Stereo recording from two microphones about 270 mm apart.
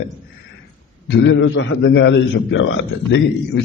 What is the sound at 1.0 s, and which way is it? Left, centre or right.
A man's voice, left.